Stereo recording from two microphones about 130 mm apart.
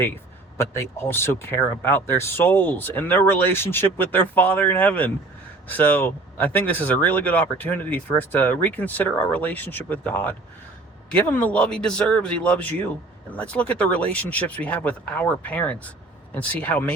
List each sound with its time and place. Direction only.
0.5 s speech: 20° left (ahead or behind)